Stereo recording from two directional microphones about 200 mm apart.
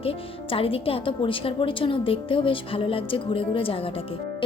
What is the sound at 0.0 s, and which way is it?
A woman's voice, 30° left (ahead or behind).